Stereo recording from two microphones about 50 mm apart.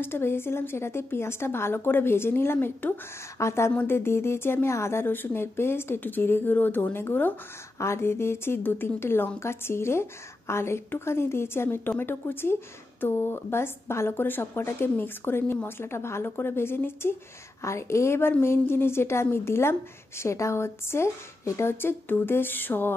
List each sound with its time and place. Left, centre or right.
0.0 s a woman's voice: left
3.3 s a woman's voice: left
3.8 s a woman's voice: left
5.0 s a woman's voice: left
5.9 s a woman's voice: left
7.8 s a woman's voice: left
17.6 s a woman's voice: left
18.4 s a woman's voice: left